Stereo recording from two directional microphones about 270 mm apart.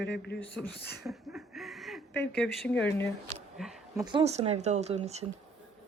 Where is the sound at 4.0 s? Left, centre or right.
Centre.